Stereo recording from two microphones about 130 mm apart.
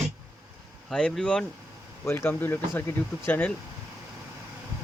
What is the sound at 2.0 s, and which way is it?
Speech, 15° left (ahead or behind).